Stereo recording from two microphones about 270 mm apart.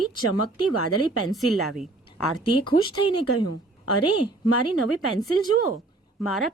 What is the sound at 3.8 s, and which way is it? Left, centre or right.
Speech, left.